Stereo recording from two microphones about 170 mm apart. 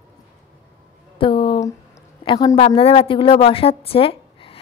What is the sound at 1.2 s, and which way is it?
A woman's voice, 30° left (ahead or behind).